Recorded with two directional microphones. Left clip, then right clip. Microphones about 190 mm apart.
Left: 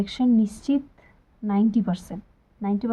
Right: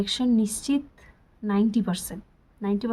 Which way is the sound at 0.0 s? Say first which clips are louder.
Left 2 dB; 15° right (ahead or behind).